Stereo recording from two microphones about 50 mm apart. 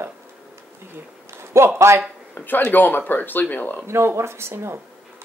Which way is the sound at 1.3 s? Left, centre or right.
Right.